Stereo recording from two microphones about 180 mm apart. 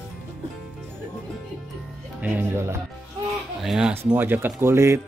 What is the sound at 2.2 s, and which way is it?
Speech, 10° right (ahead or behind).